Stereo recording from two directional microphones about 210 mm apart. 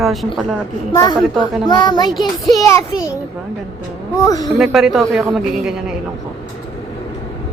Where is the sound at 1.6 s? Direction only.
20° left (ahead or behind).